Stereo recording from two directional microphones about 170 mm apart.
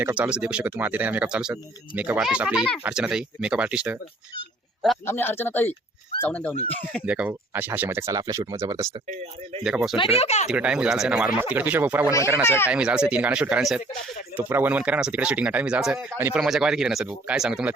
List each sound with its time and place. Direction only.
0.0 s speech: 5° right (ahead or behind)
5.0 s speech: 15° left (ahead or behind)
7.0 s speech: 5° right (ahead or behind)
9.6 s speech: 5° right (ahead or behind)
9.9 s speech: 30° left (ahead or behind)
10.5 s speech: 5° right (ahead or behind)
12.4 s speech: 15° left (ahead or behind)
12.6 s speech: 5° right (ahead or behind)